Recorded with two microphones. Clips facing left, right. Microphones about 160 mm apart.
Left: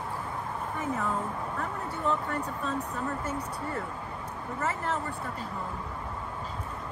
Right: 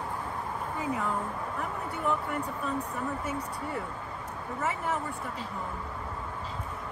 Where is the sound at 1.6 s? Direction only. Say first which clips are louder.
Even; 5° right (ahead or behind).